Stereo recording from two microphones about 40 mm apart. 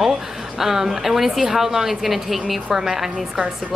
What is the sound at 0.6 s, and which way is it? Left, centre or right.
A woman's voice, centre.